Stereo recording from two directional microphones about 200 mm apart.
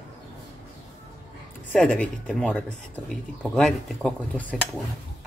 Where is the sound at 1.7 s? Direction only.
5° left (ahead or behind).